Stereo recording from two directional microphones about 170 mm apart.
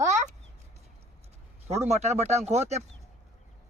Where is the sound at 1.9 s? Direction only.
40° right (ahead or behind).